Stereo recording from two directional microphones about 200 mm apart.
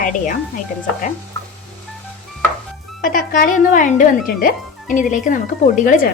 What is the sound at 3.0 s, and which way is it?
A woman's voice, 45° left (ahead or behind).